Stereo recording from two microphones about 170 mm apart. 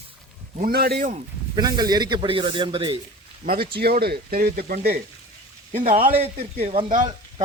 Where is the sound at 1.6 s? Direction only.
25° right (ahead or behind).